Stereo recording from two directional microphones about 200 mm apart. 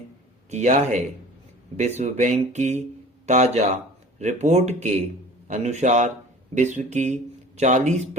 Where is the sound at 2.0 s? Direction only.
35° right (ahead or behind).